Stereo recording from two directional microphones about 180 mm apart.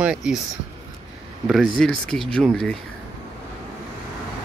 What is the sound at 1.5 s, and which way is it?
Speech, 5° left (ahead or behind).